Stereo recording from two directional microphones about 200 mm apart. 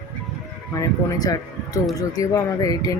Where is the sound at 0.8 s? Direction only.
20° left (ahead or behind).